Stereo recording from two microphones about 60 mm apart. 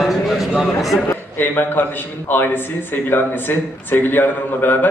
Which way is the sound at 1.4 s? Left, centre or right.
Left.